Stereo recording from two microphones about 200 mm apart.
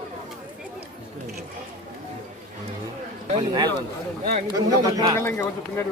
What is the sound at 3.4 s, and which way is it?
Speech, 20° right (ahead or behind).